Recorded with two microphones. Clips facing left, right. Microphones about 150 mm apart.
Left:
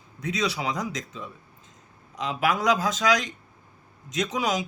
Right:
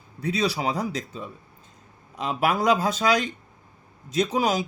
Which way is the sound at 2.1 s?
55° right (ahead or behind).